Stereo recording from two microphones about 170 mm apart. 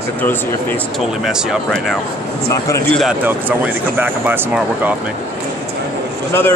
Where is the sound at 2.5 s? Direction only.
20° left (ahead or behind).